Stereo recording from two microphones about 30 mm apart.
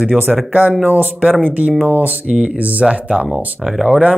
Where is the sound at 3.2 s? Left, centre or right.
Centre.